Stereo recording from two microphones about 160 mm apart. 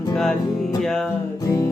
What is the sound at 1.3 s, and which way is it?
Music, 20° left (ahead or behind).